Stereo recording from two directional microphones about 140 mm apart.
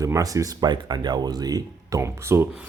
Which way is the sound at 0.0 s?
25° right (ahead or behind).